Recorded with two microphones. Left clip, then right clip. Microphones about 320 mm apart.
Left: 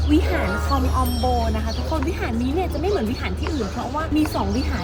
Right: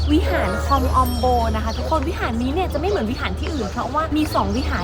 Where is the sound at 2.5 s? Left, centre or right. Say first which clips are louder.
Right 1 dB; centre.